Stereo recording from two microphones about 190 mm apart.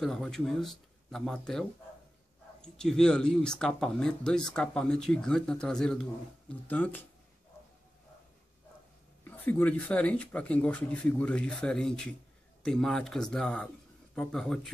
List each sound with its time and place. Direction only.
0.0 s speech: centre (ahead or behind)
9.2 s speech: 10° left (ahead or behind)